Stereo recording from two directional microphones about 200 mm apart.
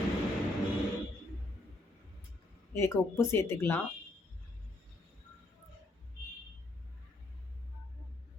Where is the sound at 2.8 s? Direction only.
10° left (ahead or behind).